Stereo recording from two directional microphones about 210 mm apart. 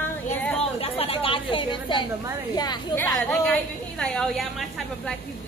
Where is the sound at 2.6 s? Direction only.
20° left (ahead or behind).